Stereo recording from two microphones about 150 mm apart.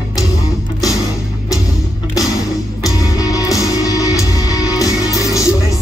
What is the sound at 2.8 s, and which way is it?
Music, 25° left (ahead or behind).